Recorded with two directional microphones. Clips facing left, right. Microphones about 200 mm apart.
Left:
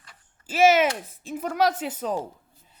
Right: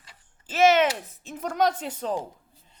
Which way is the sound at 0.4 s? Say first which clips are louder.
Left 1 dB; 10° left (ahead or behind).